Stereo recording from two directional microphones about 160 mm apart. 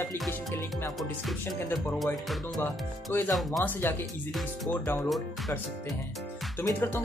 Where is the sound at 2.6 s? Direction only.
15° left (ahead or behind).